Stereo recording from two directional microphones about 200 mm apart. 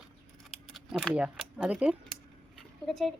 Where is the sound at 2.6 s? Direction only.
Centre (ahead or behind).